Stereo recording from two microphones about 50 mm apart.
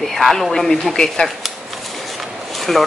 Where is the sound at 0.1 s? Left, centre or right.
Centre.